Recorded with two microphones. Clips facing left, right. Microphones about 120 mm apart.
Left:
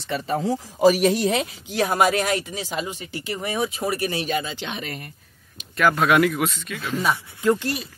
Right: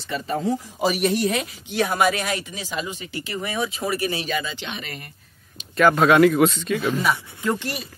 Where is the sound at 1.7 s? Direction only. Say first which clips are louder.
Left 1 dB; 40° left (ahead or behind).